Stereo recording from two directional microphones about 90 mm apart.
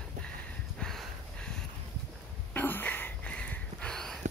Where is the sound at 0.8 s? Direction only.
5° left (ahead or behind).